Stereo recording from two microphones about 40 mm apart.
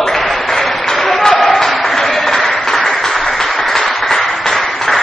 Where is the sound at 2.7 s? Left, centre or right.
Centre.